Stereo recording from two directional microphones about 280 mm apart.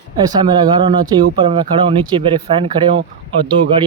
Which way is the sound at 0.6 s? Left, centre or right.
Centre.